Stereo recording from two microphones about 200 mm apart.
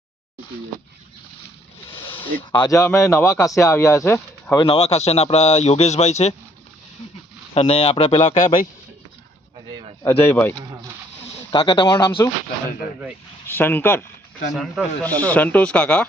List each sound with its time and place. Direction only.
2.5 s speech: 20° left (ahead or behind)
4.6 s speech: 30° left (ahead or behind)
7.5 s speech: 30° left (ahead or behind)
8.4 s a man's voice: 20° left (ahead or behind)
10.0 s speech: 10° left (ahead or behind)
10.6 s speech: 20° right (ahead or behind)
11.2 s speech: 30° left (ahead or behind)
13.5 s speech: 10° left (ahead or behind)
14.5 s speech: centre (ahead or behind)